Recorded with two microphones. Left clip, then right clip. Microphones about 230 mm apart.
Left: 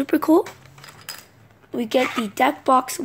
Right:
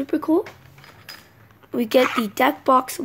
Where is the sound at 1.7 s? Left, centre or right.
Centre.